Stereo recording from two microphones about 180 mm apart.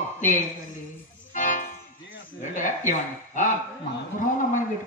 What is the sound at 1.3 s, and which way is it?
Music, 45° left (ahead or behind).